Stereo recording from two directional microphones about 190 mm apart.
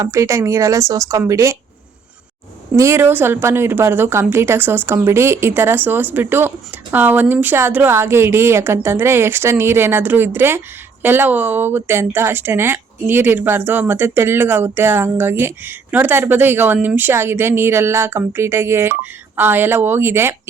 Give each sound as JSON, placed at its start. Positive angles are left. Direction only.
{"t": 0.0, "sound": "speech", "side_deg": -15}
{"t": 2.7, "sound": "speech", "side_deg": -15}